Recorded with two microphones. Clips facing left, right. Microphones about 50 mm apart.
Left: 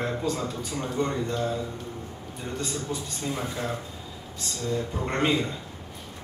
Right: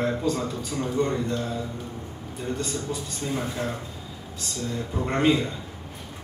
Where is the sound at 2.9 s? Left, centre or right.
Centre.